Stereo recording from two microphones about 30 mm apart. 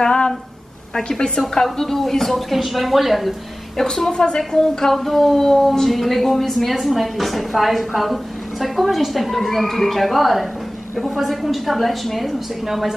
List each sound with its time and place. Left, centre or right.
0.0 s a sound: left
1.0 s a woman's voice: left
2.5 s a woman's voice: centre
4.1 s a woman's voice: left
4.9 s a woman's voice: centre